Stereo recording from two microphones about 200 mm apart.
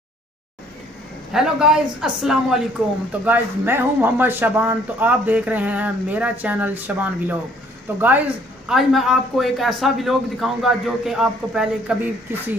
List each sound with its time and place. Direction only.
1.3 s a man's voice: 5° right (ahead or behind)
8.6 s a man's voice: centre (ahead or behind)